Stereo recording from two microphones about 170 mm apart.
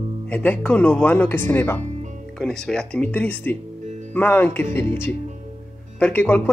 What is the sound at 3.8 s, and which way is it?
Music, 45° right (ahead or behind).